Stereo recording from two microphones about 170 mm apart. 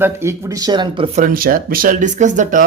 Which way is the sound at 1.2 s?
60° right (ahead or behind).